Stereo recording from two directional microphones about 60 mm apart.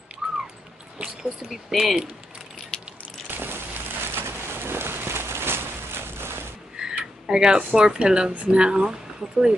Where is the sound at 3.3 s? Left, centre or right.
Right.